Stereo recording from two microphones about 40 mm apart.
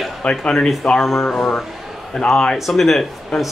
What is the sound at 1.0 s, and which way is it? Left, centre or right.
Speech, centre.